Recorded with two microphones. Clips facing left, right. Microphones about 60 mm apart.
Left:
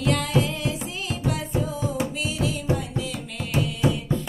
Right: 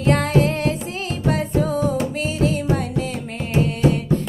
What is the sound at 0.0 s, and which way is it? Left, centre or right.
Music, right.